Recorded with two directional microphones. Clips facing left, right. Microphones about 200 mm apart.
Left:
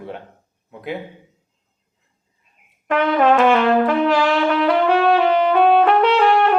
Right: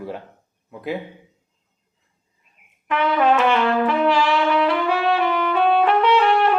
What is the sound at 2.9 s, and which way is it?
Brass instrument, 50° left (ahead or behind).